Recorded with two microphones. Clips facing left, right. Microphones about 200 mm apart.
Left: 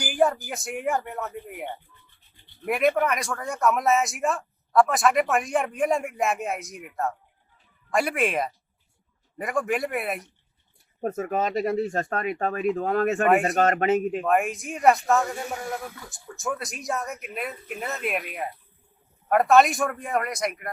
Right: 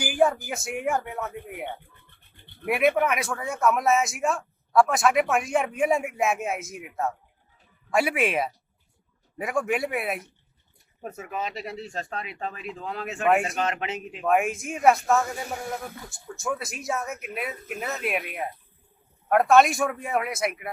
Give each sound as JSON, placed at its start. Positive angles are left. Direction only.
{"t": 0.0, "sound": "speech", "side_deg": 0}
{"t": 2.0, "sound": "toothbrush", "side_deg": -60}
{"t": 2.6, "sound": "speech", "side_deg": -5}
{"t": 11.0, "sound": "speech", "side_deg": 45}
{"t": 14.2, "sound": "speech", "side_deg": 0}